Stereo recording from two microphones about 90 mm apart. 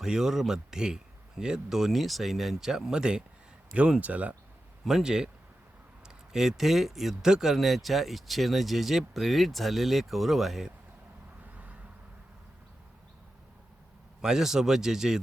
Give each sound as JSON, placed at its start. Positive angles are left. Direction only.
{"t": 0.0, "sound": "speech", "side_deg": -5}
{"t": 4.9, "sound": "speech", "side_deg": -5}
{"t": 6.3, "sound": "speech", "side_deg": -5}
{"t": 11.5, "sound": "vehicle", "side_deg": -15}
{"t": 14.2, "sound": "speech", "side_deg": -5}